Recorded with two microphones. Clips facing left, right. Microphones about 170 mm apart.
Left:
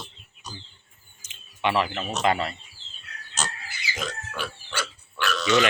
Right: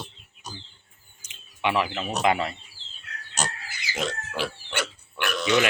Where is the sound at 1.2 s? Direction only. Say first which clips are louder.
Left 1 dB; 10° right (ahead or behind).